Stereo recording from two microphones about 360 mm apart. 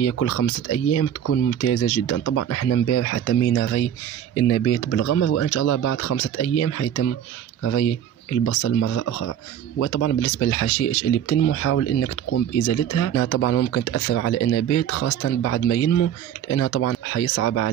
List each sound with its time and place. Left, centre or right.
0.0 s speech: left
8.5 s speech: left